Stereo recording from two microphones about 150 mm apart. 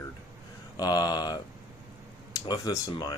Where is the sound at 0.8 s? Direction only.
25° left (ahead or behind).